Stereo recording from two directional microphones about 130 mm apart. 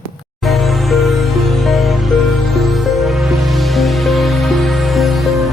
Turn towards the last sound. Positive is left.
turn(degrees=0)  # may be behind; listen again after turning